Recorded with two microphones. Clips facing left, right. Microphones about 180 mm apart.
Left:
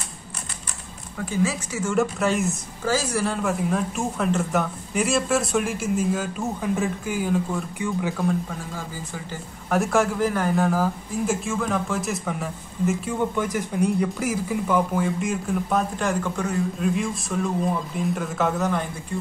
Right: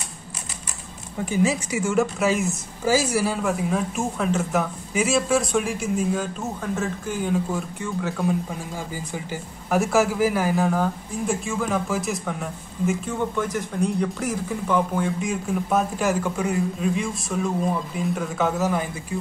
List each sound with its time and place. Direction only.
1.1 s speech: 15° right (ahead or behind)
2.0 s speech: centre (ahead or behind)
8.2 s speech: 10° right (ahead or behind)